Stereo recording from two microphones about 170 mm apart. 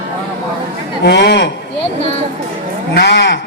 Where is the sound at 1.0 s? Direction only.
85° left.